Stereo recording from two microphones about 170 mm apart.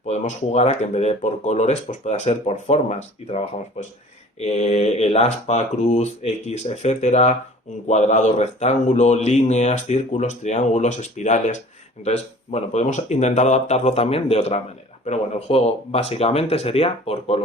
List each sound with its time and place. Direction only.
0.1 s a man's voice: 40° left (ahead or behind)